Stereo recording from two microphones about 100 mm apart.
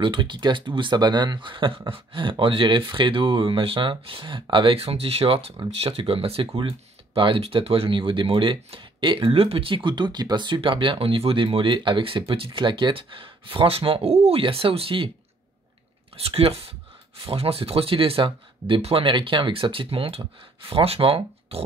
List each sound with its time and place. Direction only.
0.0 s speech: 55° right (ahead or behind)
4.7 s speech: 85° right; by 12.4 s 65° right (ahead or behind)
12.4 s speech: 50° right (ahead or behind)
16.2 s speech: 75° right (ahead or behind)